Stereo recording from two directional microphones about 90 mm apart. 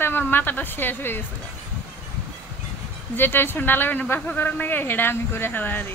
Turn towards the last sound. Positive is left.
turn(degrees=20)  # may be behind; listen again after turning